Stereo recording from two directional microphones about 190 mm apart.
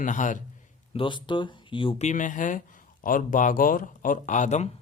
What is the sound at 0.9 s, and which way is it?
Speech, 25° left (ahead or behind).